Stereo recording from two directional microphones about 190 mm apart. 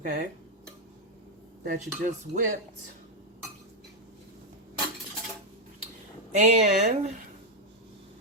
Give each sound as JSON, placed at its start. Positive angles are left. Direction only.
{"t": 0.0, "sound": "speech", "side_deg": -55}
{"t": 1.6, "sound": "speech", "side_deg": -45}
{"t": 6.4, "sound": "speech", "side_deg": -35}